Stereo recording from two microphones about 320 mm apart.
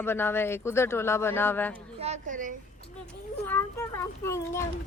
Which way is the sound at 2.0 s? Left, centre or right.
Right.